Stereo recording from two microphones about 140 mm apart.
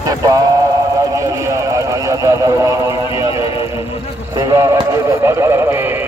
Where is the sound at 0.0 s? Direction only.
25° right (ahead or behind).